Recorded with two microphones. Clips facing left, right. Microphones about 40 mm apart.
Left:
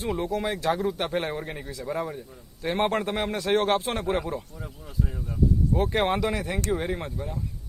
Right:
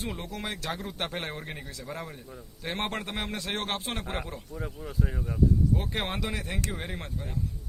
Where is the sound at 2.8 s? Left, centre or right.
Left.